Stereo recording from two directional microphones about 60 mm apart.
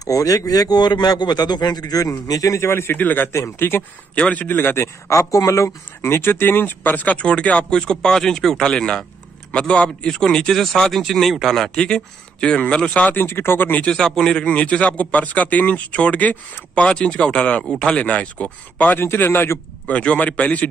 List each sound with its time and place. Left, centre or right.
0.0 s a man's voice: left
3.0 s a man's voice: left
3.3 s a man's voice: left
4.1 s a man's voice: left
5.1 s a man's voice: left; by 13.1 s centre
13.1 s speech: left
13.8 s a man's voice: centre
18.9 s a man's voice: left
19.9 s a man's voice: left